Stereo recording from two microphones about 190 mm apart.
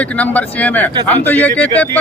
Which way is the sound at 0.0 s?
5° left (ahead or behind).